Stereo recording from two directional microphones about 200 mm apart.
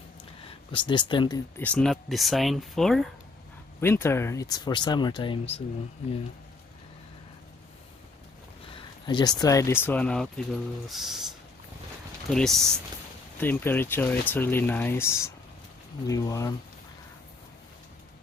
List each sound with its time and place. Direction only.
0.7 s speech: 25° left (ahead or behind)
1.6 s speech: 5° left (ahead or behind)
3.8 s speech: 10° left (ahead or behind); by 5.6 s 30° left (ahead or behind)
9.0 s speech: 20° left (ahead or behind); by 11.2 s centre (ahead or behind)
12.3 s speech: centre (ahead or behind)